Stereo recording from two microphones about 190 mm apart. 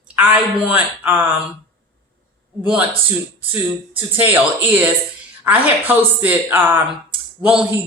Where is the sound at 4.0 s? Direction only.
10° right (ahead or behind).